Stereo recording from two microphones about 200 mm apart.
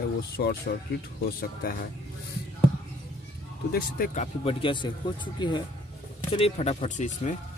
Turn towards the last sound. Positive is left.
turn(degrees=40)  # may be behind; listen again after turning